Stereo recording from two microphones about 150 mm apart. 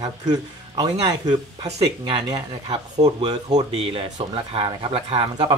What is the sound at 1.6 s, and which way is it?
Speech, 40° right (ahead or behind).